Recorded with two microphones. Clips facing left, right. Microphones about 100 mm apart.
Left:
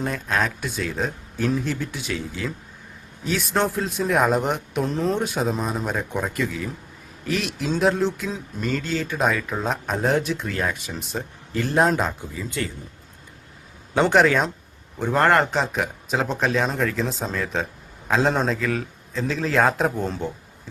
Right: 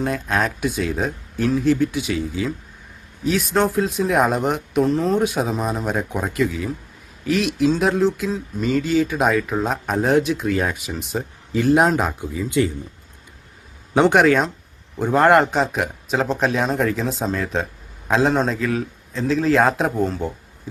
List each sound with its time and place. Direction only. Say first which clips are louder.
0.0 s speech: right 3 dB; centre (ahead or behind)
14.0 s a man's voice: right 3 dB; centre (ahead or behind)
15.5 s speech: right 3 dB; centre (ahead or behind)